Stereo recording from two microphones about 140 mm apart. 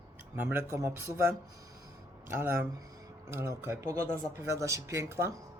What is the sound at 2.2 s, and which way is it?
Speech, 15° right (ahead or behind).